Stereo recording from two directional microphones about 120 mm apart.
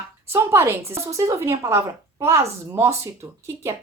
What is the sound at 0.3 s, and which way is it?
Speech, 25° right (ahead or behind).